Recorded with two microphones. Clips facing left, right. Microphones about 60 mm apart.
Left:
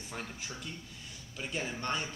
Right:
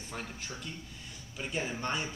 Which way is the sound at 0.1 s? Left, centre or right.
Centre.